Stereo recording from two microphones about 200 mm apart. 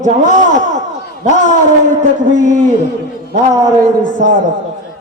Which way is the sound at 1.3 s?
35° left (ahead or behind).